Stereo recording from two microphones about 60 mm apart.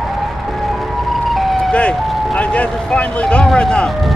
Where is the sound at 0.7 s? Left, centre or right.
Centre.